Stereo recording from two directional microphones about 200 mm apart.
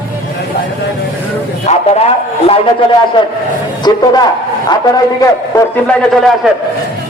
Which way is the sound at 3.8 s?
20° left (ahead or behind).